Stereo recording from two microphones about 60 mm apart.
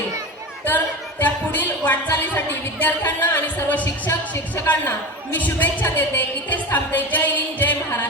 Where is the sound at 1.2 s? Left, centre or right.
Left.